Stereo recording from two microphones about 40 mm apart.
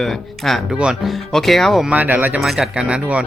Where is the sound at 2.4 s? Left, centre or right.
Centre.